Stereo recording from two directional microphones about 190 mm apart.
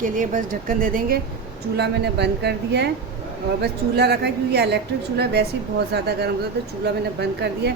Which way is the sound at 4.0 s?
60° right (ahead or behind).